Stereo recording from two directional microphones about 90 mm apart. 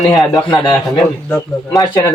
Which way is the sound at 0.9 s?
Centre (ahead or behind).